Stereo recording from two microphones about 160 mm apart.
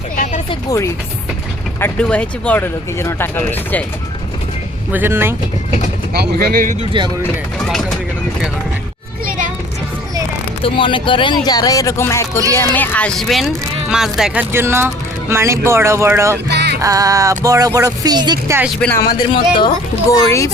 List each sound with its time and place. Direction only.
1.8 s speech: 5° left (ahead or behind)
4.9 s speech: 10° right (ahead or behind)
6.1 s speech: 70° right (ahead or behind)
7.7 s speech: centre (ahead or behind)
10.6 s speech: 30° left (ahead or behind); by 14.4 s 5° right (ahead or behind)
14.5 s speech: 15° right (ahead or behind)
16.5 s music: 90° right
16.8 s speech: 20° right (ahead or behind)
18.8 s speech: 10° left (ahead or behind)
19.3 s speech: 30° left (ahead or behind)
20.1 s speech: 20° left (ahead or behind)